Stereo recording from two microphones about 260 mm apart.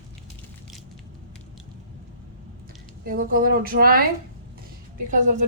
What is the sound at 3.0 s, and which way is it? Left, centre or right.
Speech, right.